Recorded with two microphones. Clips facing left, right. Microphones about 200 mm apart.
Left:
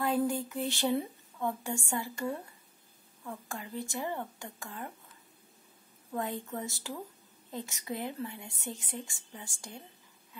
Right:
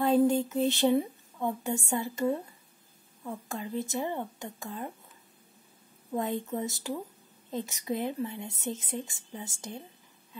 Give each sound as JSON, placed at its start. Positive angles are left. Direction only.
{"t": 0.0, "sound": "a woman's voice", "side_deg": -25}
{"t": 6.1, "sound": "a woman's voice", "side_deg": -20}